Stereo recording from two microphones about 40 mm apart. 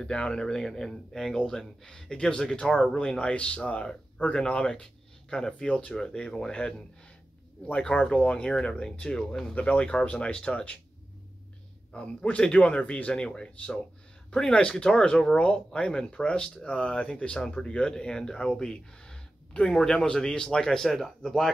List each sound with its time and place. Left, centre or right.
0.1 s speech: left
0.8 s speech: centre; by 4.3 s left
4.3 s speech: left
8.2 s speech: left
12.3 s speech: left; by 21.5 s centre